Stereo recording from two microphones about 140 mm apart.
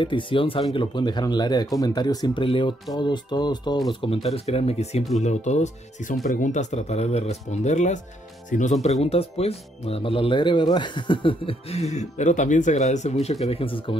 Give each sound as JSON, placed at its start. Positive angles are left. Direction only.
{"t": 0.0, "sound": "speech", "side_deg": 35}
{"t": 9.0, "sound": "speech", "side_deg": 45}